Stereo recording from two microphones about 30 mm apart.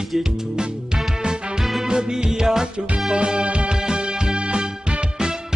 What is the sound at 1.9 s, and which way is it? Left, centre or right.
Music, right.